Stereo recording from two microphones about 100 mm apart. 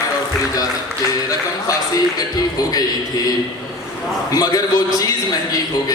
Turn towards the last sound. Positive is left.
turn(degrees=40)  # may be behind; listen again after turning